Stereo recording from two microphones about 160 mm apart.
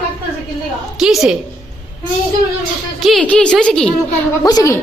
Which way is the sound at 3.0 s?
Centre (ahead or behind).